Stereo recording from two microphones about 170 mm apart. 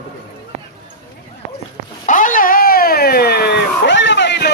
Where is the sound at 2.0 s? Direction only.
50° left (ahead or behind).